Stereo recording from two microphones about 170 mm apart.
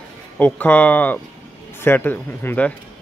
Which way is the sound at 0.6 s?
10° left (ahead or behind).